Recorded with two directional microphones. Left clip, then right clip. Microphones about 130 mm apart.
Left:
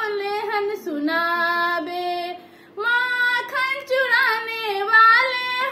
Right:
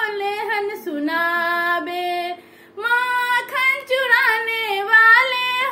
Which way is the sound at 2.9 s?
45° right (ahead or behind).